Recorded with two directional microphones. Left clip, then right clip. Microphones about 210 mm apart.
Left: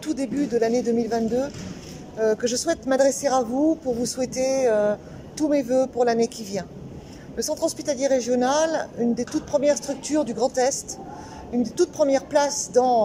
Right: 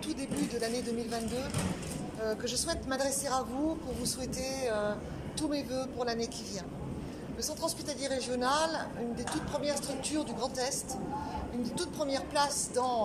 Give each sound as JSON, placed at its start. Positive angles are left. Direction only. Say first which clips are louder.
{"t": 0.0, "sound": "speech", "louder": "left 10 dB", "side_deg": 35}